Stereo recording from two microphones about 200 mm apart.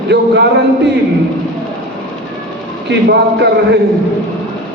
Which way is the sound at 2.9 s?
60° right (ahead or behind).